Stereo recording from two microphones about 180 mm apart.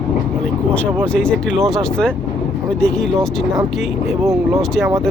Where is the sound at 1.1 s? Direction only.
5° left (ahead or behind).